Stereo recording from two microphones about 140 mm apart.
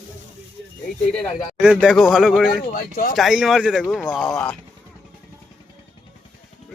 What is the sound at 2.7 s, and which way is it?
Speech, 85° left.